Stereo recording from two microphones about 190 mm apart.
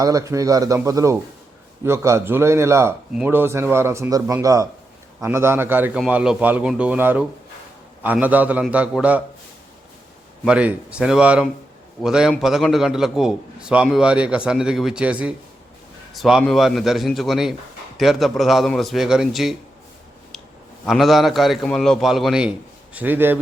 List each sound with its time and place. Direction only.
0.0 s speech: 20° right (ahead or behind)
10.4 s a man's voice: 5° right (ahead or behind)
20.8 s a man's voice: centre (ahead or behind)